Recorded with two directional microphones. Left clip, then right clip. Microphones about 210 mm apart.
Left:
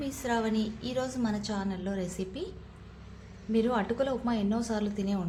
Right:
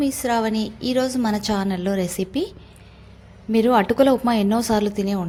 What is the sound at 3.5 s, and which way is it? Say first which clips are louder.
A woman's voice: right 12 dB; 40° right (ahead or behind).